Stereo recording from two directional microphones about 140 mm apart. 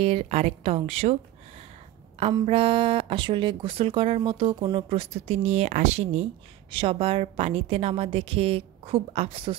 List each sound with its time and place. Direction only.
0.0 s speech: 45° right (ahead or behind)
2.4 s speech: 40° right (ahead or behind)
6.7 s speech: 40° right (ahead or behind)